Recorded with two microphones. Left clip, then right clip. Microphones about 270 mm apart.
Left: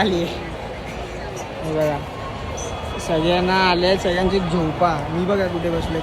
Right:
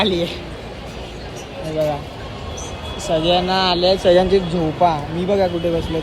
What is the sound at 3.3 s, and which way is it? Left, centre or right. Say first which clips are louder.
Speech: left 2 dB; centre.